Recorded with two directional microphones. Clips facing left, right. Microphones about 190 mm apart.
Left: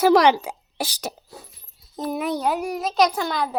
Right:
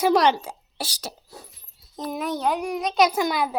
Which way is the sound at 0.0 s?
10° left (ahead or behind).